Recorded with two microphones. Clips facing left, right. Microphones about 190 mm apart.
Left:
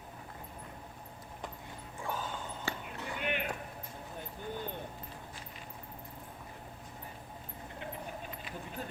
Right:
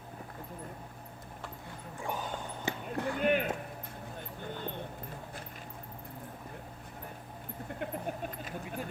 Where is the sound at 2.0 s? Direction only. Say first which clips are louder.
Right 2 dB; 15° right (ahead or behind).